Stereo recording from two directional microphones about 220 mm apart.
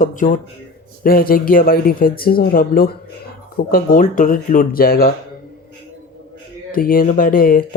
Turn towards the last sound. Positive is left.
turn(degrees=40)  # may be behind; listen again after turning